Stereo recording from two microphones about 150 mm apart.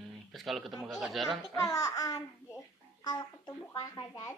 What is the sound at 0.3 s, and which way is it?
Speech, centre (ahead or behind).